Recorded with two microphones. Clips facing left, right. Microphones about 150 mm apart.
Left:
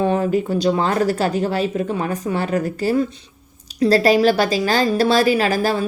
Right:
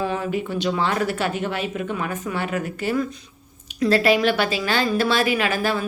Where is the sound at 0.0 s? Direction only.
35° left (ahead or behind).